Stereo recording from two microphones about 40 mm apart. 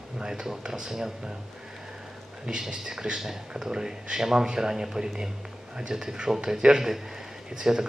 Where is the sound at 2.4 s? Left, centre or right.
Right.